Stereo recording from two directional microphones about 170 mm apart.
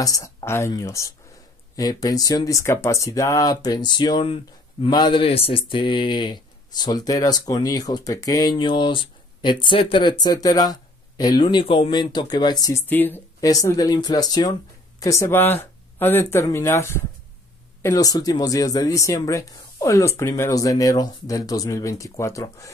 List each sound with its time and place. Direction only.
0.0 s speech: 20° left (ahead or behind)